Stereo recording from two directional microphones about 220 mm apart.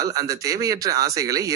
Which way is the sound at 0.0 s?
15° right (ahead or behind).